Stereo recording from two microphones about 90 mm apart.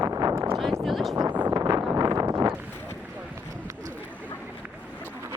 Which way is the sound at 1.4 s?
45° right (ahead or behind).